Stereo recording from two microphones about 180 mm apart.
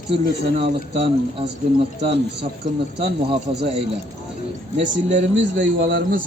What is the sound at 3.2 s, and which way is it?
Speech, 30° right (ahead or behind).